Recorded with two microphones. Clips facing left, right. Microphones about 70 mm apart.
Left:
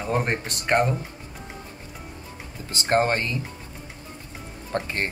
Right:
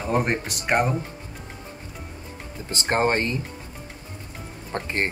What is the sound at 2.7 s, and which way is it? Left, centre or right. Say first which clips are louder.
Speech: even; right.